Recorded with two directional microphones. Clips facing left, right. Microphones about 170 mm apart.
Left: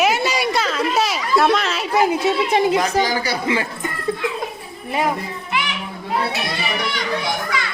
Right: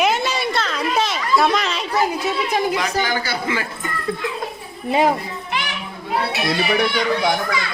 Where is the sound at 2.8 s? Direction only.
35° left (ahead or behind).